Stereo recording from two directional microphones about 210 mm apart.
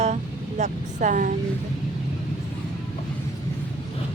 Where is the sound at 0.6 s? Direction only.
35° right (ahead or behind).